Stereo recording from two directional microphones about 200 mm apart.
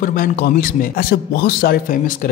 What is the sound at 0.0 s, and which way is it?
A man's voice, 45° left (ahead or behind).